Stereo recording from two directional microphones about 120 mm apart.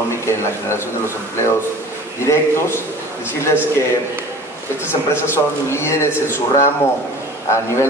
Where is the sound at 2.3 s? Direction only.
25° left (ahead or behind).